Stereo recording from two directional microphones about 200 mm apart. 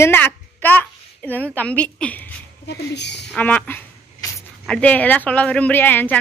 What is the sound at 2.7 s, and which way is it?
Speech, 60° left (ahead or behind).